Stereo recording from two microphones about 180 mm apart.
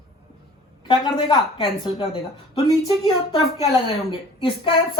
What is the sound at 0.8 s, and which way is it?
A woman's voice, 25° left (ahead or behind).